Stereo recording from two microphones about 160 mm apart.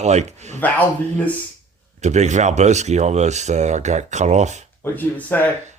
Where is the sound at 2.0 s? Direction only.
45° right (ahead or behind).